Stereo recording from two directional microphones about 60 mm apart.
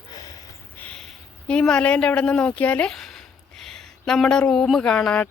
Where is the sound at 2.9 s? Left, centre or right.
Centre.